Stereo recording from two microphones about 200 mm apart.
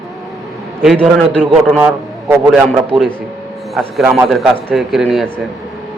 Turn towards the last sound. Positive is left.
turn(degrees=0)  # may be behind; listen again after turning